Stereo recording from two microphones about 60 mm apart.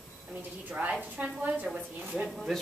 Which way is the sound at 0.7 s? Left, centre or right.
Right.